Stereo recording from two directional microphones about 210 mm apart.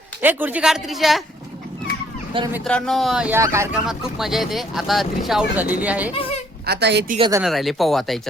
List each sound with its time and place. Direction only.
0.2 s speech: 10° right (ahead or behind)
2.6 s speech: 5° left (ahead or behind)
6.1 s a woman's voice: 25° left (ahead or behind)
6.7 s a woman's voice: 55° right (ahead or behind)
7.2 s speech: 15° right (ahead or behind)
7.4 s speech: centre (ahead or behind)